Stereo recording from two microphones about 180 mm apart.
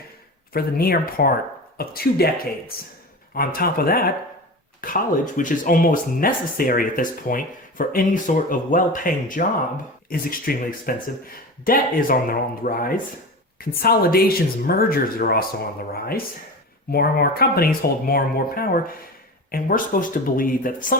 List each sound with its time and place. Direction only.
0.5 s speech: 55° left (ahead or behind)